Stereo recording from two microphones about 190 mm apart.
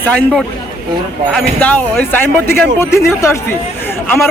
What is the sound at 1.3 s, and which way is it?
A man's voice, 5° left (ahead or behind).